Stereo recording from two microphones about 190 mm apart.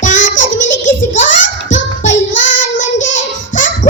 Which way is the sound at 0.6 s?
80° left.